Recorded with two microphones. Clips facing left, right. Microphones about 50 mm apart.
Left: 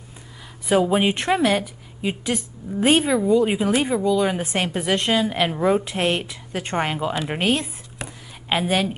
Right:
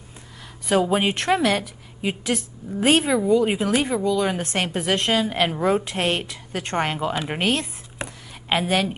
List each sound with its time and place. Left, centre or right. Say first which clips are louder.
0.7 s a woman's voice: left 2 dB; centre
8.0 s whispering: right 2 dB; right
8.5 s a woman's voice: even; centre